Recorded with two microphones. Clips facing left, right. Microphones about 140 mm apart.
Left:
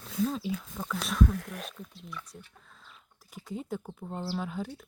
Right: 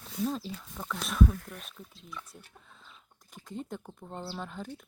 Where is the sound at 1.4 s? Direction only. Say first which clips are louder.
Left 6 dB; 85° left.